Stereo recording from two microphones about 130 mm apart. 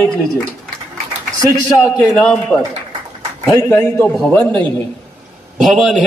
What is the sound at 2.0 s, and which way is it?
Speech, 10° left (ahead or behind).